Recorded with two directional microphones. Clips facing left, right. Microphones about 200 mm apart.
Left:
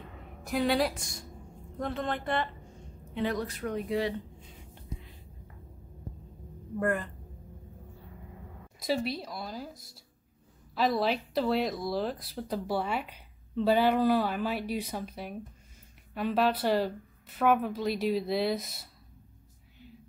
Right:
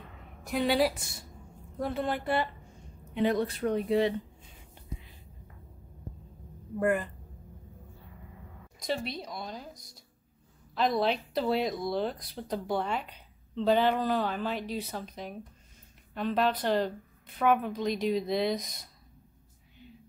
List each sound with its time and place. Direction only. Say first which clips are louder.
0.5 s speech: right 1 dB; centre (ahead or behind)
3.2 s speech: right 4 dB; 25° right (ahead or behind)
6.8 s speech: right 2 dB; 10° right (ahead or behind)
8.7 s speech: left 3 dB; 5° left (ahead or behind)